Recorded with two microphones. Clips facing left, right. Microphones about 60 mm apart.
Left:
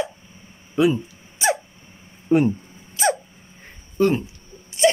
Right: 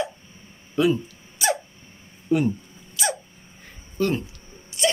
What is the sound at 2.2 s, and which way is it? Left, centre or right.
Speech, left.